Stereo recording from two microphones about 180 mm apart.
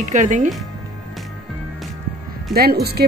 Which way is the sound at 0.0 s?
45° right (ahead or behind).